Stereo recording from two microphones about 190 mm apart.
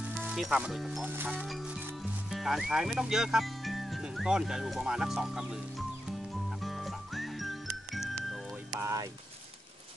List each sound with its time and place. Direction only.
0.1 s speech: 5° right (ahead or behind)
6.6 s music: centre (ahead or behind)
8.6 s music: 15° right (ahead or behind)